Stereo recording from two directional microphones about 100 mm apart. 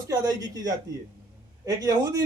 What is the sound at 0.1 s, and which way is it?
Speech, 40° right (ahead or behind).